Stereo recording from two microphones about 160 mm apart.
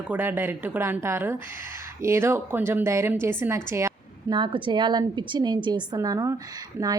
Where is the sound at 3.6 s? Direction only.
20° right (ahead or behind).